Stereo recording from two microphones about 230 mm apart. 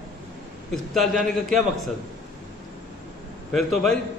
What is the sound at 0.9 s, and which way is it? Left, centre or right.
Speech, centre.